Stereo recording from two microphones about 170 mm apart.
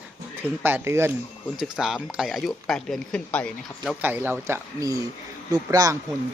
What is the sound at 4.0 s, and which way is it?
Speech, 10° right (ahead or behind).